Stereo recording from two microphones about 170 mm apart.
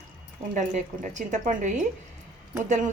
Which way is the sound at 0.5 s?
45° right (ahead or behind).